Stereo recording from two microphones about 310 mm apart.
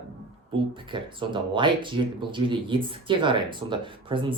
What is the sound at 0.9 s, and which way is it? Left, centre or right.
Speech, centre.